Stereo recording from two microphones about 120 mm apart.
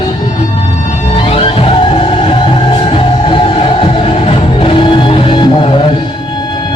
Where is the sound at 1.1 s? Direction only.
50° left (ahead or behind).